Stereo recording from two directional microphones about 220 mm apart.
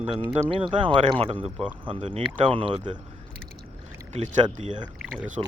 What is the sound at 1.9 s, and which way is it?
Speech, 25° right (ahead or behind).